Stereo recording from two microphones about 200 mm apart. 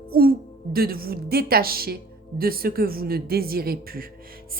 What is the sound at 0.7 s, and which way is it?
Speech, 50° right (ahead or behind).